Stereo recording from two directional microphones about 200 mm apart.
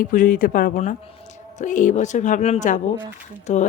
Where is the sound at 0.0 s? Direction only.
40° left (ahead or behind).